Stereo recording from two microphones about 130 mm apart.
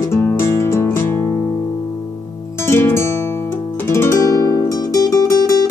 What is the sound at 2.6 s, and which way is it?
Music, 20° left (ahead or behind).